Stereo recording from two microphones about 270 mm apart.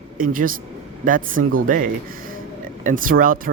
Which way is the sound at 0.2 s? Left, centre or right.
Right.